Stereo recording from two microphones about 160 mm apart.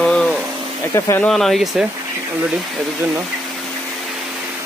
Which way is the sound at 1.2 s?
Centre (ahead or behind).